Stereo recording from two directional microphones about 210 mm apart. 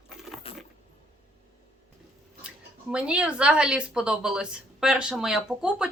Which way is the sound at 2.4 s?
5° right (ahead or behind).